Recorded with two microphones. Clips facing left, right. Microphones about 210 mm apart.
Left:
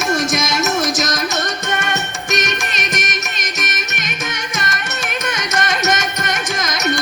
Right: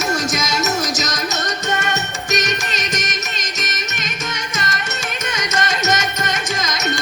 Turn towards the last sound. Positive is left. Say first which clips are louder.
# left 1 dB
turn(degrees=50)  # may be behind; listen again after turning